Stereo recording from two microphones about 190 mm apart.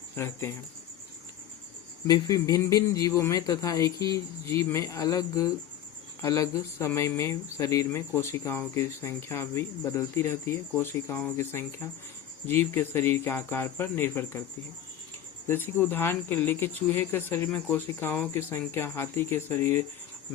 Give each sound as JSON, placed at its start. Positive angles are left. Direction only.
{"t": 0.2, "sound": "speech", "side_deg": 15}
{"t": 2.0, "sound": "speech", "side_deg": 20}
{"t": 15.4, "sound": "speech", "side_deg": 10}